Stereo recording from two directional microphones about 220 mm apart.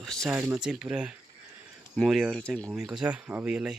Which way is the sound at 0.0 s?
Centre (ahead or behind).